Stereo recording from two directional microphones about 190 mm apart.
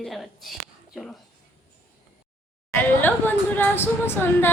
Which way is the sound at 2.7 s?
10° left (ahead or behind).